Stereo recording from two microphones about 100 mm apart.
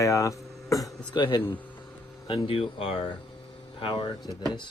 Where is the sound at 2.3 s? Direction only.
65° left (ahead or behind).